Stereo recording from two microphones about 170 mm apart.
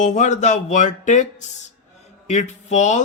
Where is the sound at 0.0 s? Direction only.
45° left (ahead or behind).